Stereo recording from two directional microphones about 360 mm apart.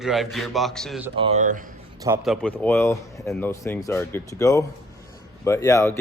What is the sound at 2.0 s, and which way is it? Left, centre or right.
A man's voice, centre.